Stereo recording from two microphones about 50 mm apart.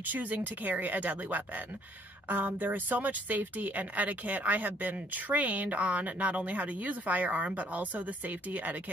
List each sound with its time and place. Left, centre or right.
0.0 s a woman's voice: right